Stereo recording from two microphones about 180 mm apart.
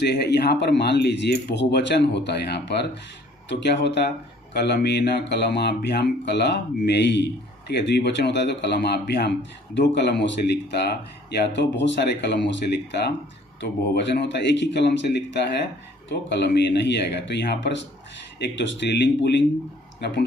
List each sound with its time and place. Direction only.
0.0 s speech: 70° left (ahead or behind)
11.3 s speech: 80° left